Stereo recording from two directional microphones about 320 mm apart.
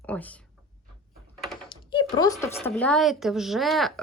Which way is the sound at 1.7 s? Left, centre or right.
Centre.